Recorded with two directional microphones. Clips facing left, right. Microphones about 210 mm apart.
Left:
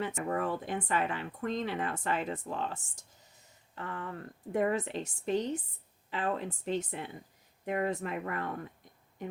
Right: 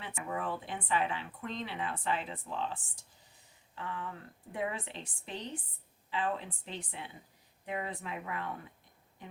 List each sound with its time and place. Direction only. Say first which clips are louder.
0.0 s speech: left 6 dB; 45° left (ahead or behind)